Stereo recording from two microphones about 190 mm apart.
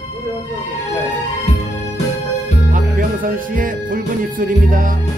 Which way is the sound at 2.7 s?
45° right (ahead or behind).